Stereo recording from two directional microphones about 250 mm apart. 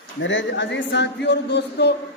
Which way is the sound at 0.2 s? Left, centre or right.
Left.